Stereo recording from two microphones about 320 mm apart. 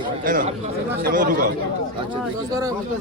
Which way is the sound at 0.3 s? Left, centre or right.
Right.